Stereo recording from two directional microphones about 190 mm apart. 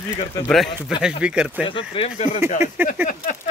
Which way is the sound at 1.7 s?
25° left (ahead or behind).